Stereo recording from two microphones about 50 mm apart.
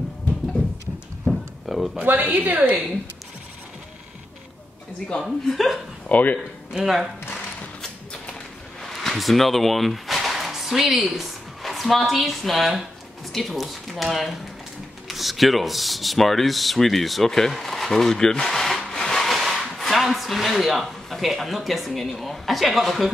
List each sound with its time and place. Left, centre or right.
1.2 s a sound: centre
2.0 s a woman's voice: right
5.2 s speech: centre
6.0 s speech: left
6.7 s speech: centre
8.8 s speech: centre